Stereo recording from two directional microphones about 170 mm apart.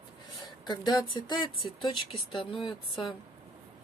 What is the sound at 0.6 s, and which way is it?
Speech, 25° left (ahead or behind).